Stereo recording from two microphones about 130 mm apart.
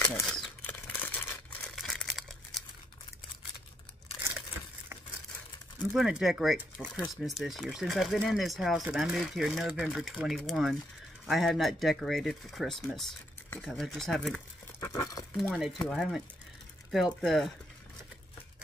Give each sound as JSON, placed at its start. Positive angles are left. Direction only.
{"t": 0.3, "sound": "crumpling", "side_deg": 10}
{"t": 1.8, "sound": "crumpling", "side_deg": 0}
{"t": 5.9, "sound": "speech", "side_deg": -5}
{"t": 14.8, "sound": "a sound", "side_deg": 20}
{"t": 15.3, "sound": "speech", "side_deg": 0}